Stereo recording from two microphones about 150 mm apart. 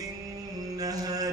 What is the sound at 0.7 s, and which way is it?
Music, 25° right (ahead or behind).